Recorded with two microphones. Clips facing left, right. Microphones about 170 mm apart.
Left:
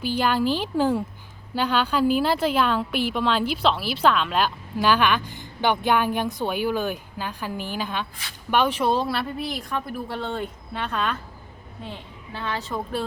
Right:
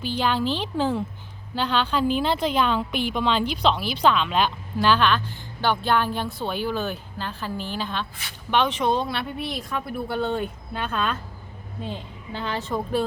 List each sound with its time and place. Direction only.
0.0 s a woman's voice: 10° left (ahead or behind)
12.7 s speech: 15° right (ahead or behind)